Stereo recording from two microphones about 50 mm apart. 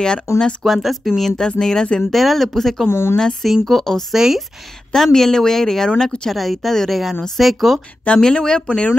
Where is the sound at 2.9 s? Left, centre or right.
Left.